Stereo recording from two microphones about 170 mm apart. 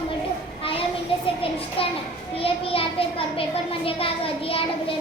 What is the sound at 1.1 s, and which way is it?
A child's voice, 35° left (ahead or behind).